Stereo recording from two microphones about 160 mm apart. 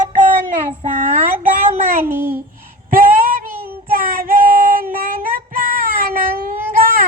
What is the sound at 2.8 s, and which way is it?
Female singing, 60° right (ahead or behind).